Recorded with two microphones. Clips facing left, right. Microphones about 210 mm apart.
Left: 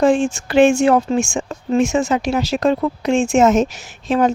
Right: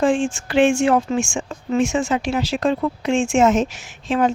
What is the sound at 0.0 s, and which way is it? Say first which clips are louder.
Speech: left 3 dB; 40° left (ahead or behind).